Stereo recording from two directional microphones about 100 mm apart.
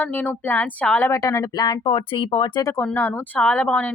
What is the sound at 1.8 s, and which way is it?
Speech, 60° left (ahead or behind).